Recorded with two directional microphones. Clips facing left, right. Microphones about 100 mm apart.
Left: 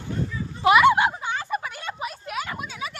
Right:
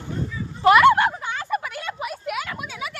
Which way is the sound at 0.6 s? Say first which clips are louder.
Right 2 dB; 5° left (ahead or behind).